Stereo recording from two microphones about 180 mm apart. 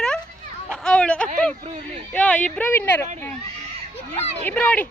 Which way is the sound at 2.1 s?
10° left (ahead or behind).